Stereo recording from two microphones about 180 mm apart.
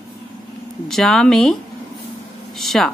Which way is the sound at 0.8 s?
Centre (ahead or behind).